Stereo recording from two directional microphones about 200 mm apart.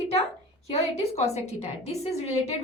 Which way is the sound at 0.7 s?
30° left (ahead or behind).